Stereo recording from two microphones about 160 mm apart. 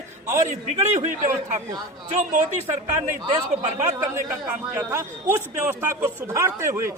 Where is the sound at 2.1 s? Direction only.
45° right (ahead or behind).